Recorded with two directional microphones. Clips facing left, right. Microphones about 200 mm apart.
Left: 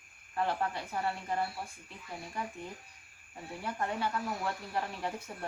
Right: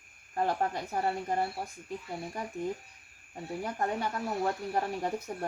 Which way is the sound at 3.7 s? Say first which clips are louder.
Right 1 dB; 40° right (ahead or behind).